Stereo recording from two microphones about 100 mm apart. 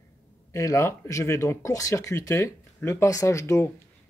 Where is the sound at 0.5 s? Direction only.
30° left (ahead or behind).